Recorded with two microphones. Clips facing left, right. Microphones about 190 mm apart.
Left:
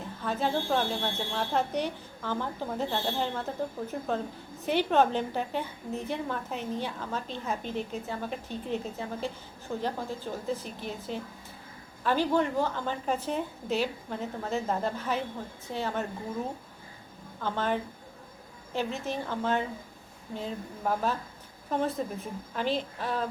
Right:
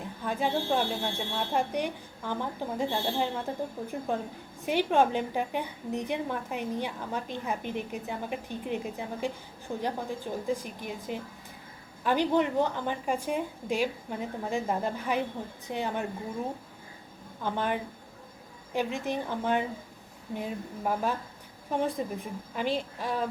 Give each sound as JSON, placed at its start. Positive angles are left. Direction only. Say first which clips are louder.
{"t": 0.2, "sound": "a woman's voice", "louder": "even", "side_deg": -15}
{"t": 17.4, "sound": "a woman's voice", "louder": "even", "side_deg": -15}